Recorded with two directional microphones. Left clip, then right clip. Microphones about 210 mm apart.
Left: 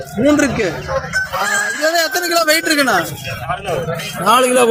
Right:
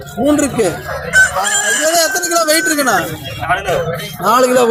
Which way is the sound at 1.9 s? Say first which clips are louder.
Right 2 dB; 5° right (ahead or behind).